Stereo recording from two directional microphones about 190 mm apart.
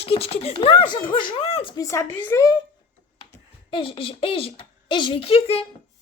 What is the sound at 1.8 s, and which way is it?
Speech, 15° left (ahead or behind).